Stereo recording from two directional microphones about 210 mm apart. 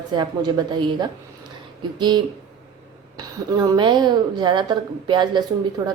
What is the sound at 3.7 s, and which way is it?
Speech, 20° right (ahead or behind).